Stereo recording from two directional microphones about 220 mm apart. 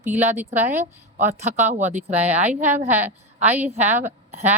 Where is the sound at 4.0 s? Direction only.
30° right (ahead or behind).